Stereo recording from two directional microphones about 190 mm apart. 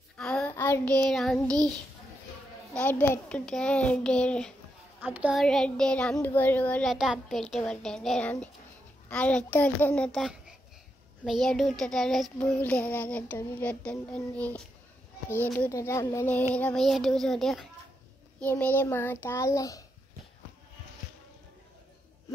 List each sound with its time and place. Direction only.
0.2 s child singing: 5° left (ahead or behind)
2.7 s child singing: 10° left (ahead or behind)
5.0 s child singing: 10° right (ahead or behind)
15.2 s music: 10° left (ahead or behind)
16.5 s child singing: 5° left (ahead or behind)
18.4 s music: 10° left (ahead or behind)